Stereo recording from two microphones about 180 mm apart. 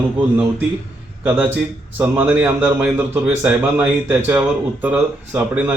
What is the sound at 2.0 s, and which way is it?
A man's voice, 10° right (ahead or behind).